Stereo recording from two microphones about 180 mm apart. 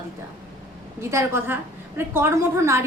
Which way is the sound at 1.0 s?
15° right (ahead or behind).